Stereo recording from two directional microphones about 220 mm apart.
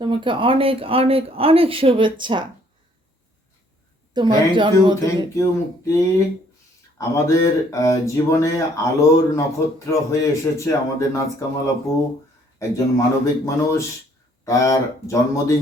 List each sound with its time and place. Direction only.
0.0 s speech: 20° right (ahead or behind)
4.1 s speech: 20° right (ahead or behind)
5.0 s speech: 15° left (ahead or behind)
7.3 s speech: 15° left (ahead or behind)
12.5 s speech: 15° left (ahead or behind)